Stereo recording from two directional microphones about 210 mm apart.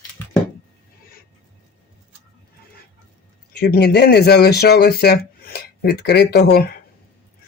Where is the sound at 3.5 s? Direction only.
50° left (ahead or behind).